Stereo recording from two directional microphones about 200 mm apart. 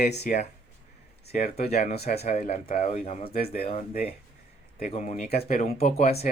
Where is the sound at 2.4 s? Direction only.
40° left (ahead or behind).